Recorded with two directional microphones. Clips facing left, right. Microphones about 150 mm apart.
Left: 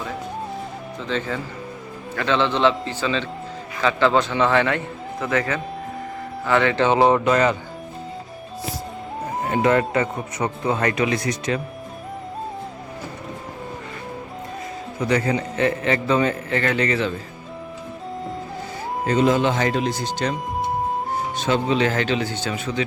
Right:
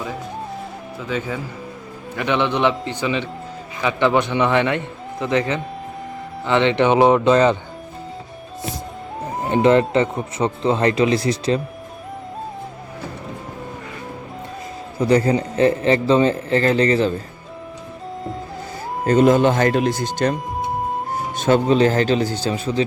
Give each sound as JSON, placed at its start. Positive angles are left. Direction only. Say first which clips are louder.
{"t": 0.9, "sound": "a man's voice", "louder": "right 1 dB", "side_deg": -10}
{"t": 9.5, "sound": "speech", "louder": "right 4 dB", "side_deg": -25}
{"t": 15.0, "sound": "a man's voice", "louder": "right 5 dB", "side_deg": -35}
{"t": 19.0, "sound": "speech", "louder": "right 5 dB", "side_deg": -50}
{"t": 21.3, "sound": "a man's voice", "louder": "right 6 dB", "side_deg": -50}